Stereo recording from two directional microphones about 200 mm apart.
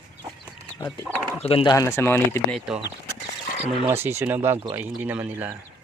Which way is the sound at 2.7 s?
Centre (ahead or behind).